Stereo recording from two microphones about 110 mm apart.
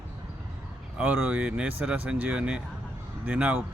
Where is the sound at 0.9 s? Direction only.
15° right (ahead or behind).